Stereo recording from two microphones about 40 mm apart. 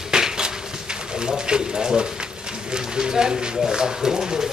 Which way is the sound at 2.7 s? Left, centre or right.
Centre.